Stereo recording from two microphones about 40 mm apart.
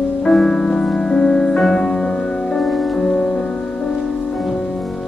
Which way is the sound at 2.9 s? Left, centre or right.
Centre.